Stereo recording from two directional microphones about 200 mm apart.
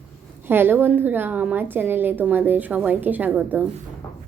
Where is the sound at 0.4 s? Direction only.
10° right (ahead or behind).